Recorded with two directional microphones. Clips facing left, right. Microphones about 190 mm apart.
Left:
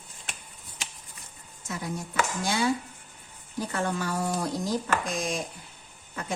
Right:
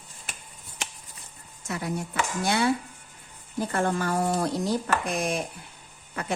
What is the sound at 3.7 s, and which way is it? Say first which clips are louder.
Speech: right 4 dB; 50° right (ahead or behind).